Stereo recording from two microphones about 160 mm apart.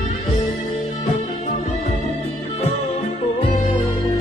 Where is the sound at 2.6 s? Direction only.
40° left (ahead or behind).